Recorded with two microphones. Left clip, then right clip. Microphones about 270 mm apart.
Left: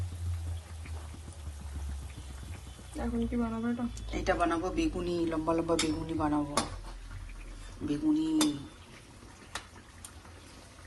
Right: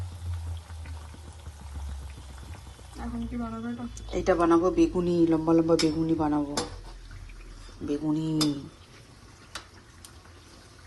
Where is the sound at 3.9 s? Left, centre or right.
Right.